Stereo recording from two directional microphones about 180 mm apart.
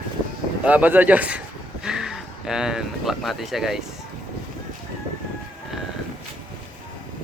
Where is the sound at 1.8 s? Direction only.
Centre (ahead or behind).